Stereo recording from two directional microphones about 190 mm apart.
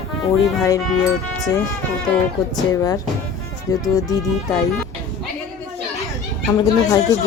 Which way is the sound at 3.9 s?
20° left (ahead or behind).